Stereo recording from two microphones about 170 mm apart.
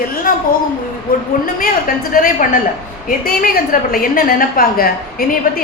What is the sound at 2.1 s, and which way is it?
A woman's voice, 60° left (ahead or behind).